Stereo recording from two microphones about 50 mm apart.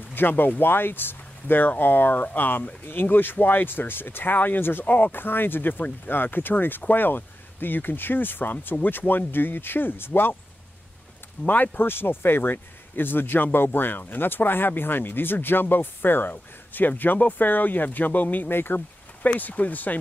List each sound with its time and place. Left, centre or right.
0.1 s speech: left
4.8 s speech: left
11.4 s speech: left
18.5 s speech: left
19.2 s speech: left